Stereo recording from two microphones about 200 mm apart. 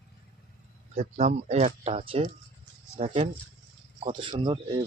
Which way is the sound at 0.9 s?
30° right (ahead or behind).